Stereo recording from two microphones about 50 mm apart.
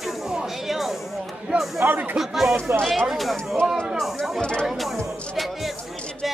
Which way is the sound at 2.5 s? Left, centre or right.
Right.